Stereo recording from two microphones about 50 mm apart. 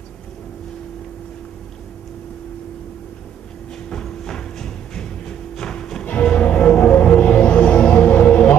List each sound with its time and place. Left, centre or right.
3.9 s music: centre
6.0 s music: left